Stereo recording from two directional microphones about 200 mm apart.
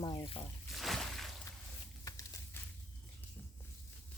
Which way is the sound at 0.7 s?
Centre (ahead or behind).